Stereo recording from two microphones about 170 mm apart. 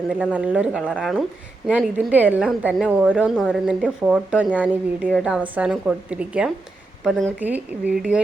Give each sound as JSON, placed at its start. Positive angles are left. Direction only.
{"t": 0.1, "sound": "a woman's voice", "side_deg": -10}